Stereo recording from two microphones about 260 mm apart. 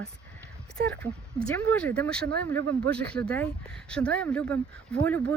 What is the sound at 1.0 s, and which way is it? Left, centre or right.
Speech, centre.